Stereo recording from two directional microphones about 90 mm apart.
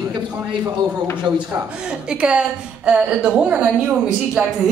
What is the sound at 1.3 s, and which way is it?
Speech, 55° right (ahead or behind).